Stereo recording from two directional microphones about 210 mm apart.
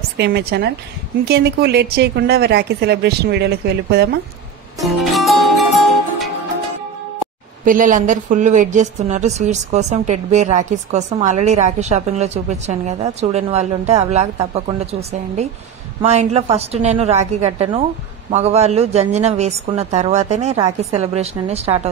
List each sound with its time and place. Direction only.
0.2 s a woman's voice: 50° right (ahead or behind)
4.8 s music: centre (ahead or behind)
7.6 s a woman's voice: 40° right (ahead or behind)